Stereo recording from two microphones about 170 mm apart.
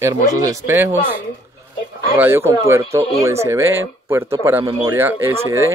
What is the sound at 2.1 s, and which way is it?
Speech, 15° right (ahead or behind).